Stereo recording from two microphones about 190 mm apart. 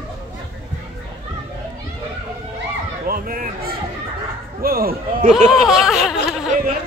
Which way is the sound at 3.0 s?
50° right (ahead or behind).